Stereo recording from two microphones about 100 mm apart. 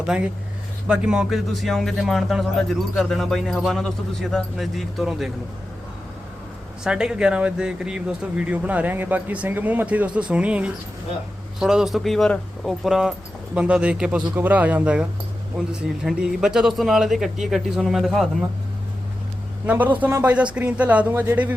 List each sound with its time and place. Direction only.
0.1 s speech: 5° right (ahead or behind)
6.8 s speech: 10° right (ahead or behind)
19.6 s speech: 15° right (ahead or behind)